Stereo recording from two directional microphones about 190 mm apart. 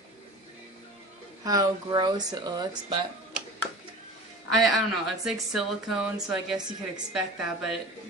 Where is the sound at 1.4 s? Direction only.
20° right (ahead or behind).